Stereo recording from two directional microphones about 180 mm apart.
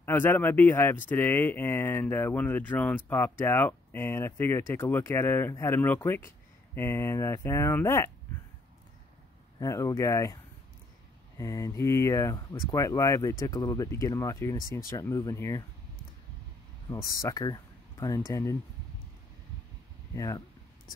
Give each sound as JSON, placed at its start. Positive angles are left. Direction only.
{"t": 0.0, "sound": "speech", "side_deg": 10}
{"t": 9.6, "sound": "speech", "side_deg": 20}
{"t": 17.2, "sound": "speech", "side_deg": 20}
{"t": 20.2, "sound": "speech", "side_deg": 20}